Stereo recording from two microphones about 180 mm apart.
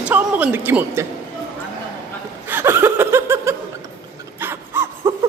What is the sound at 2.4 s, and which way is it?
Laughter, 15° right (ahead or behind).